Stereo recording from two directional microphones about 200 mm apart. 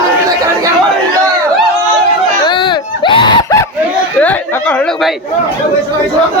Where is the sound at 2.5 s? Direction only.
25° left (ahead or behind).